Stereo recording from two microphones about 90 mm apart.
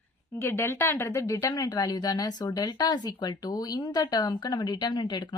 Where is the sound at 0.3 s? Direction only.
30° left (ahead or behind).